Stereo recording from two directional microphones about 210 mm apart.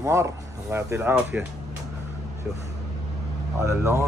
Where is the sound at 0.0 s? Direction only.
15° right (ahead or behind).